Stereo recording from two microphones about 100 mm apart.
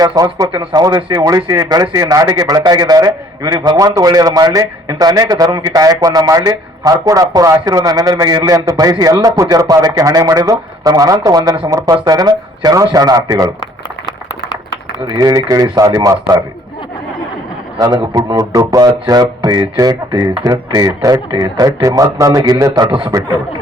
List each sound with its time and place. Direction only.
0.0 s a man's voice: 40° right (ahead or behind)
15.0 s a man's voice: 40° right (ahead or behind)
17.7 s a man's voice: 40° right (ahead or behind)
21.2 s a man's voice: 45° right (ahead or behind)
21.8 s a man's voice: 35° right (ahead or behind)
22.9 s speech: 55° right (ahead or behind)